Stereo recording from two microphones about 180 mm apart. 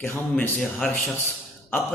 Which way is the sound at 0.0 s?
10° left (ahead or behind).